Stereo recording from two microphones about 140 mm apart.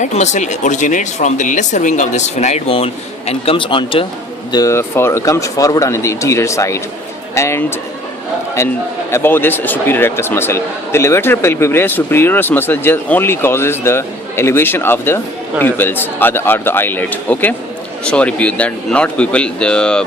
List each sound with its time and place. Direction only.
0.0 s speech: 55° left (ahead or behind); by 4.0 s 35° left (ahead or behind)
4.5 s a man's voice: 20° left (ahead or behind)